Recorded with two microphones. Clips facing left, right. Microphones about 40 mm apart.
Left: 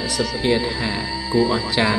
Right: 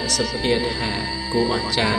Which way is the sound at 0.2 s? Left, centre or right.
Centre.